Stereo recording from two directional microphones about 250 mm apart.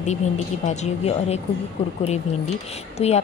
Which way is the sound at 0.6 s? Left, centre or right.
Left.